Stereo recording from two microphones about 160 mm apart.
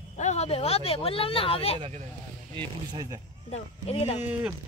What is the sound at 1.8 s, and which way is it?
Speech, 45° right (ahead or behind).